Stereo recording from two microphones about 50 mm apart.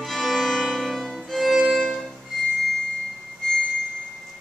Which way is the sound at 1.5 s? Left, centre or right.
Centre.